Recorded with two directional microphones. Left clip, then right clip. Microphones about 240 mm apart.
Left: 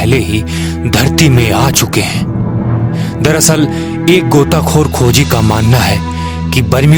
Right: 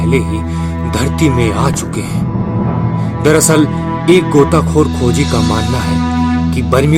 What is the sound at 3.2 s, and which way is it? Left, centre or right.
Speech, left.